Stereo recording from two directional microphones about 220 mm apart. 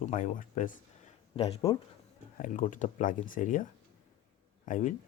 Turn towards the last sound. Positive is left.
turn(degrees=35)  # may be behind; listen again after turning